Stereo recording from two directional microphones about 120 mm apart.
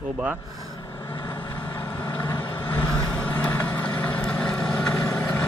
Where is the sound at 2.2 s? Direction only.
40° left (ahead or behind).